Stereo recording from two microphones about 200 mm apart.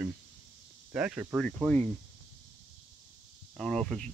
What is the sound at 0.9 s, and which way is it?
Speech, 5° right (ahead or behind).